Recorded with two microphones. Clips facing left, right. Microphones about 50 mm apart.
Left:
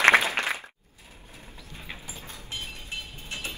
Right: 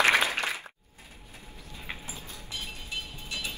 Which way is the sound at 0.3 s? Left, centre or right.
Left.